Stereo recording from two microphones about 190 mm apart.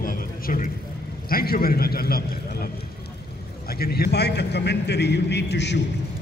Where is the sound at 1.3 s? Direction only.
50° left (ahead or behind).